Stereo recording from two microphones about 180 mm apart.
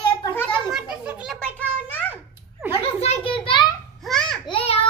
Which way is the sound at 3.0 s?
35° left (ahead or behind).